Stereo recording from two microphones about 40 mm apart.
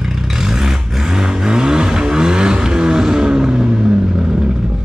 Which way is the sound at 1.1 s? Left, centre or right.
Centre.